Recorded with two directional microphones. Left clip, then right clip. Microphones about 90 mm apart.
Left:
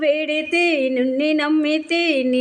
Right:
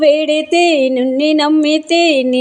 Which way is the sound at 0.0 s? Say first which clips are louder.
Right 8 dB; 50° right (ahead or behind).